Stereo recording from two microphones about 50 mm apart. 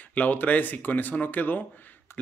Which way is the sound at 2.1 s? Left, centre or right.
Left.